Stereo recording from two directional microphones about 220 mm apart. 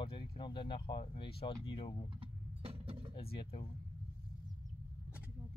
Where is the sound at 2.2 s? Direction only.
25° right (ahead or behind).